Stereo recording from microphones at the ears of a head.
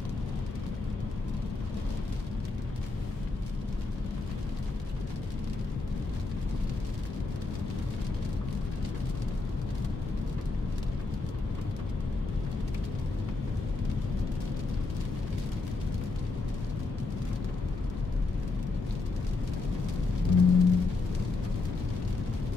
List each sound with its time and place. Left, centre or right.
20.2 s music: left